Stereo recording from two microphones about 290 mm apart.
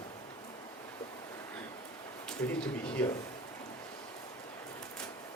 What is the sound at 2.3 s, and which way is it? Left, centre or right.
Speech, centre.